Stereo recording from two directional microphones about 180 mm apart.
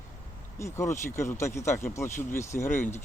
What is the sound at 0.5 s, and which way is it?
Speech, 15° left (ahead or behind).